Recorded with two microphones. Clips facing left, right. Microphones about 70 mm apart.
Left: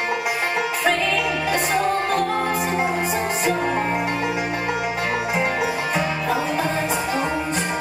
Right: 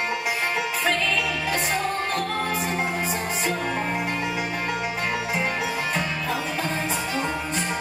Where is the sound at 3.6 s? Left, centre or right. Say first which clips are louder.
Left 5 dB; centre.